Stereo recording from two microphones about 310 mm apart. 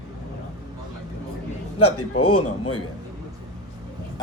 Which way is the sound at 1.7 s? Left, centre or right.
Left.